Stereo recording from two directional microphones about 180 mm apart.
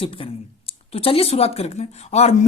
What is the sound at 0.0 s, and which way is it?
Speech, 30° left (ahead or behind).